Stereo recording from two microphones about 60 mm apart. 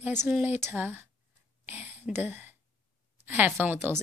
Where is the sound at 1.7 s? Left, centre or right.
Right.